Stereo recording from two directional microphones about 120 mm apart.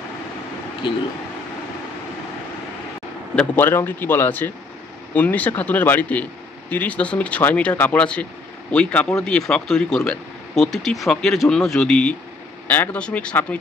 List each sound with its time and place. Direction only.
3.3 s speech: 15° left (ahead or behind)